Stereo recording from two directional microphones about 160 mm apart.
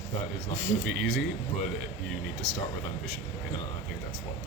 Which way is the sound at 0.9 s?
Centre (ahead or behind).